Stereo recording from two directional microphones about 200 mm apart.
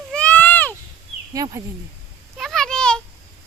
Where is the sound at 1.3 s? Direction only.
15° right (ahead or behind).